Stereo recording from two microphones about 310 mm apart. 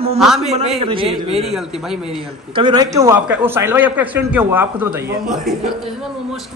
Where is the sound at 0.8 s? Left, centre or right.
Centre.